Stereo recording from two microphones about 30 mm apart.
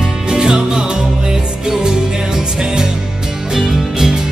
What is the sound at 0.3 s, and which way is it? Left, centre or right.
Music, centre.